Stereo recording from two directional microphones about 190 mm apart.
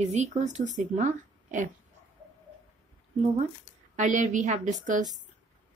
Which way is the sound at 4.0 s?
40° right (ahead or behind).